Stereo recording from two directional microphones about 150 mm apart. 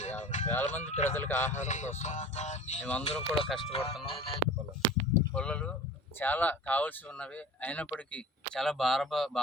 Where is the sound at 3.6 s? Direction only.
40° left (ahead or behind).